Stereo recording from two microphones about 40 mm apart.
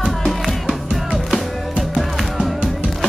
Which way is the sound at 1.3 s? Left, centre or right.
Centre.